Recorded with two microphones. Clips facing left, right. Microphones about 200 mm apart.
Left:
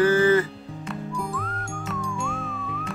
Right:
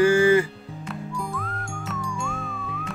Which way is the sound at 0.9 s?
Centre (ahead or behind).